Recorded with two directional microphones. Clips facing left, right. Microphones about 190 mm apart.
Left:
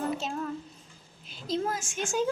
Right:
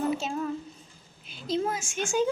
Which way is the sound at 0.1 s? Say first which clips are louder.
Right 3 dB; 5° right (ahead or behind).